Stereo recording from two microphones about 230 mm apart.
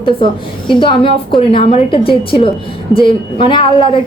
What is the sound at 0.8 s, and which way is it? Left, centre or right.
A woman's voice, left.